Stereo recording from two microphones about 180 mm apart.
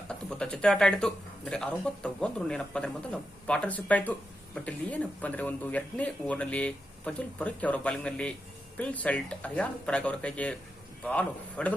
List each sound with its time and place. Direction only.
0.1 s speech: 5° left (ahead or behind)